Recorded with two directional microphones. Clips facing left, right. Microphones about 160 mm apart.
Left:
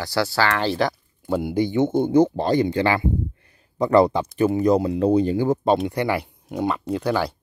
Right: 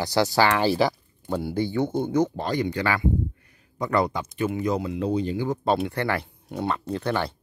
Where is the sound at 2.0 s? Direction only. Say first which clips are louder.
Left 8 dB; 30° left (ahead or behind); by 5.5 s 45° left (ahead or behind).